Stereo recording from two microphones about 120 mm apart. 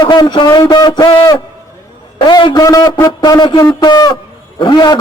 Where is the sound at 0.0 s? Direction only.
40° left (ahead or behind).